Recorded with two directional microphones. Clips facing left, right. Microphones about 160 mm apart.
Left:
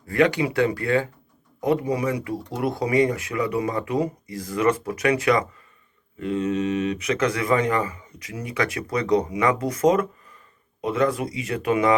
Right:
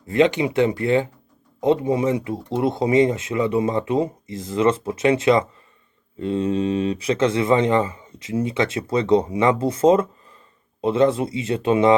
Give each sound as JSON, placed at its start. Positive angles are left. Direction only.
{"t": 0.1, "sound": "speech", "side_deg": -20}